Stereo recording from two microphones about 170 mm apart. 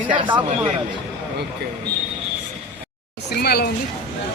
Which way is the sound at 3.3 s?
65° left (ahead or behind).